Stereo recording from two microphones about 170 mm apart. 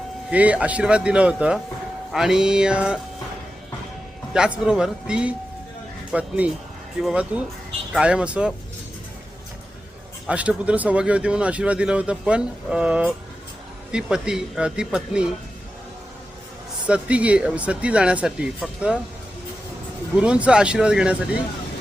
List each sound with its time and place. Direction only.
0.3 s speech: 10° right (ahead or behind)
4.4 s speech: 5° right (ahead or behind)
10.2 s speech: 5° right (ahead or behind)
16.8 s speech: 10° right (ahead or behind)
20.1 s speech: 5° right (ahead or behind)